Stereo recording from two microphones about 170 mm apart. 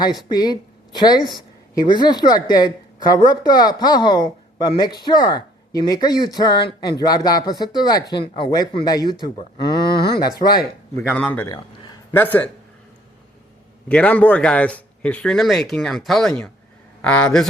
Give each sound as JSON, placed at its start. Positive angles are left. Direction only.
{"t": 0.0, "sound": "a woman's voice", "side_deg": 25}
{"t": 9.8, "sound": "a sound", "side_deg": 70}
{"t": 10.2, "sound": "speech", "side_deg": 25}
{"t": 11.1, "sound": "a man's voice", "side_deg": 10}
{"t": 13.8, "sound": "a man's voice", "side_deg": 5}